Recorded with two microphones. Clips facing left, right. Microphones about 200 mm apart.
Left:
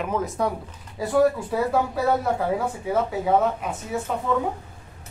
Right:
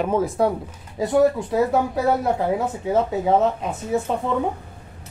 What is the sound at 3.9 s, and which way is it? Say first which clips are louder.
Speech: right 7 dB; 25° right (ahead or behind).